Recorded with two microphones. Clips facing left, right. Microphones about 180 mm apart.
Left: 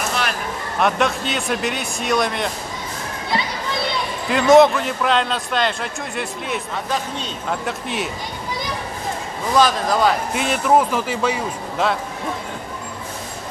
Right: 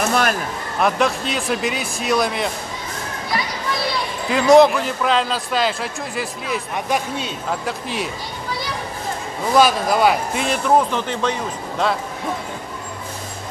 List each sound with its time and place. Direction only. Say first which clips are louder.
0.1 s a sound: right 5 dB; 45° right (ahead or behind)
0.7 s a man's voice: right 1 dB; centre (ahead or behind)
4.3 s a man's voice: even; centre (ahead or behind)
6.7 s a man's voice: right 2 dB; 15° right (ahead or behind)
7.6 s a man's voice: even; centre (ahead or behind)
9.6 s a man's voice: right 1 dB; 10° right (ahead or behind)
10.3 s a man's voice: even; 5° left (ahead or behind)